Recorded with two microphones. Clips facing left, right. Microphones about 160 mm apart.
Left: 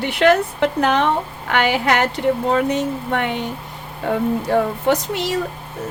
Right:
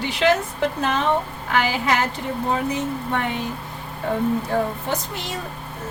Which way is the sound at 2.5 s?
85° left.